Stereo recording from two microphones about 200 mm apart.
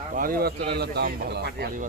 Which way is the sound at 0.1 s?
45° right (ahead or behind).